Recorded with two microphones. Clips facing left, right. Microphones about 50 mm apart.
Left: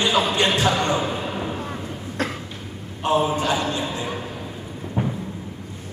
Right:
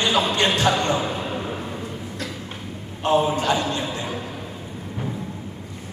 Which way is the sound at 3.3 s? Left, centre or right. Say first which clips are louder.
Even; centre.